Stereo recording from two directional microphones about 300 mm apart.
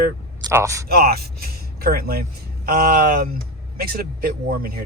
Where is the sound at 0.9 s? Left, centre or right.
Right.